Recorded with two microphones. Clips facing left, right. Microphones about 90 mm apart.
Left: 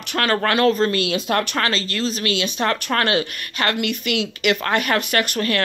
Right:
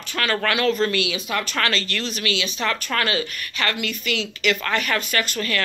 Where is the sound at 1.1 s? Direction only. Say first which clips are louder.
Left 5 dB; 60° left (ahead or behind).